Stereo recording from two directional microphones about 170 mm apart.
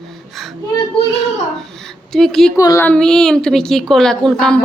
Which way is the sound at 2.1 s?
5° left (ahead or behind).